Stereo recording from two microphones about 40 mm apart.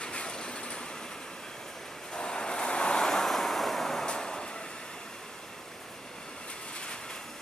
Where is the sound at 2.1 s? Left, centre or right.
Left.